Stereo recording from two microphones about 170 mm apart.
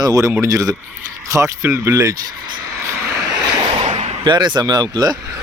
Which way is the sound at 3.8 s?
40° right (ahead or behind).